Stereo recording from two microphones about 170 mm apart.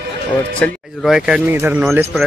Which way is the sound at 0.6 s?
Centre (ahead or behind).